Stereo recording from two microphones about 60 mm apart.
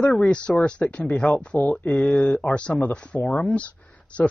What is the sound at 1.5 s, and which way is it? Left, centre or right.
Speech, left.